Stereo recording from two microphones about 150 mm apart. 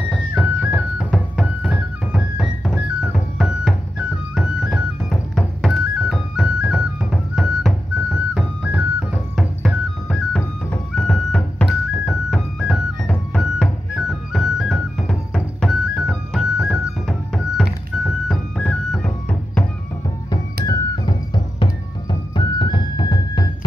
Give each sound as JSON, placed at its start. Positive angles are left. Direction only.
{"t": 0.1, "sound": "music", "side_deg": -5}
{"t": 20.6, "sound": "music", "side_deg": 30}
{"t": 22.3, "sound": "music", "side_deg": 30}